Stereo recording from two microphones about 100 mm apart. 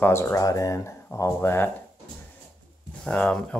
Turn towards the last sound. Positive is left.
turn(degrees=10)  # may be behind; listen again after turning